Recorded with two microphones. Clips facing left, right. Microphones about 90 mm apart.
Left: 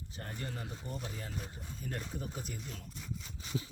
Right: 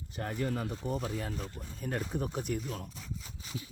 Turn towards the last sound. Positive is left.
turn(degrees=0)  # may be behind; listen again after turning